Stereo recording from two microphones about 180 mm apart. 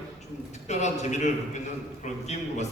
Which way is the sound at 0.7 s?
40° left (ahead or behind).